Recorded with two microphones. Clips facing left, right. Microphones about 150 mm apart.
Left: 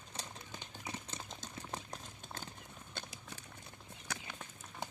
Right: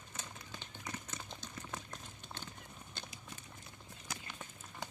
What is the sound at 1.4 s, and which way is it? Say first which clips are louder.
Run: left 1 dB; 40° left (ahead or behind).